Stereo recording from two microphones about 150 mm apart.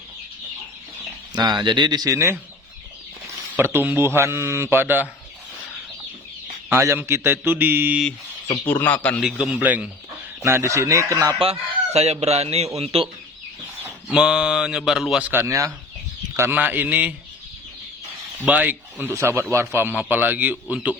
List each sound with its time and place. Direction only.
1.3 s speech: 30° right (ahead or behind)
3.5 s speech: 15° right (ahead or behind)
6.7 s speech: 15° right (ahead or behind)
8.6 s a man's voice: 15° left (ahead or behind)
9.2 s speech: 10° right (ahead or behind)
11.3 s speech: 40° right (ahead or behind)
13.8 s speech: 5° right (ahead or behind)
18.3 s speech: 10° right (ahead or behind)